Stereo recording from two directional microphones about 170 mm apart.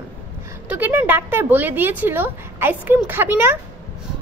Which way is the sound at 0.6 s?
10° right (ahead or behind).